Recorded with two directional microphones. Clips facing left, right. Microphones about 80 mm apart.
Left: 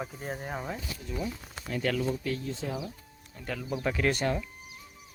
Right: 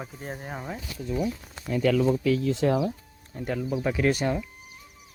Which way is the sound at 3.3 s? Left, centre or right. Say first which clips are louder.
Right 9 dB; right.